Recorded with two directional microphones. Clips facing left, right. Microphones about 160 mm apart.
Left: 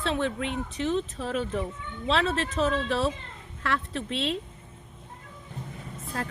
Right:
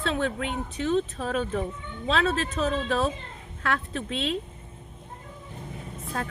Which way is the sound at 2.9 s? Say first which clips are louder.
Right 1 dB; 50° right (ahead or behind).